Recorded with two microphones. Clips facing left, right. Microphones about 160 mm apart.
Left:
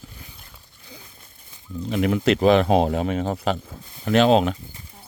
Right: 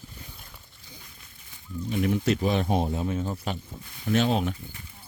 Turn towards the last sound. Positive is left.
turn(degrees=90)